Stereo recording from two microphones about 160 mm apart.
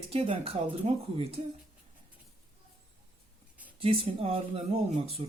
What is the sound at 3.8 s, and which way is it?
A woman's voice, 40° right (ahead or behind).